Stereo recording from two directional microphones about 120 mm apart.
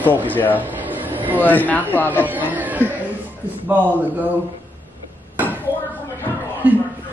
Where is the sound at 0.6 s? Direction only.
15° right (ahead or behind).